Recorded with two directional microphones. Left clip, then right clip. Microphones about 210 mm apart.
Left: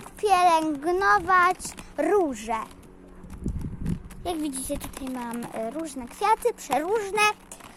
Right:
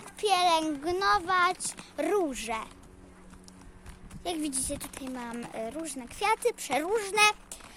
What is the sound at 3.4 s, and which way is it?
Horse, 5° left (ahead or behind).